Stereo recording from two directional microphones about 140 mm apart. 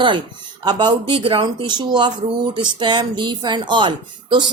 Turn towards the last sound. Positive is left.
turn(degrees=-35)  # may be behind; listen again after turning